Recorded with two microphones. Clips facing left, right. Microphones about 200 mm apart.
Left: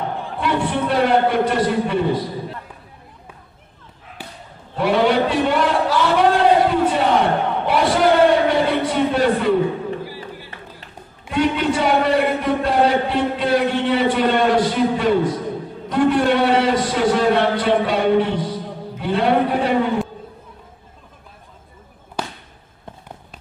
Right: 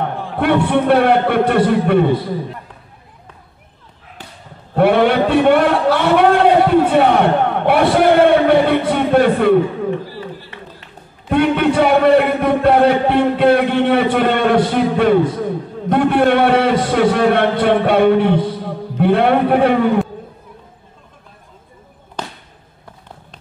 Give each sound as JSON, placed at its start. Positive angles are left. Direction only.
{"t": 0.4, "sound": "a man's voice", "side_deg": -60}
{"t": 4.2, "sound": "basketball bounce", "side_deg": 10}
{"t": 4.7, "sound": "a sound", "side_deg": -55}
{"t": 10.0, "sound": "run", "side_deg": 10}
{"t": 11.2, "sound": "a man's voice", "side_deg": -55}
{"t": 22.2, "sound": "a sound", "side_deg": 10}